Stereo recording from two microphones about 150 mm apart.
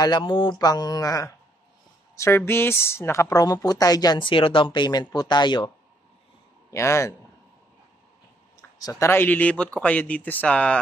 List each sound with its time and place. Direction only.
0.0 s a woman's voice: 30° left (ahead or behind)
6.7 s a woman's voice: 20° left (ahead or behind)
8.5 s speech: 25° left (ahead or behind)